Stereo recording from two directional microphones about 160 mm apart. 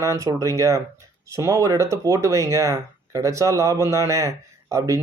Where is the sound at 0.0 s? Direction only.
20° right (ahead or behind).